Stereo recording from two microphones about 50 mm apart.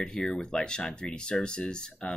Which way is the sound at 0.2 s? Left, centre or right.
Centre.